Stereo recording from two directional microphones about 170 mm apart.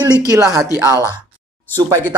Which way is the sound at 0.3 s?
20° right (ahead or behind).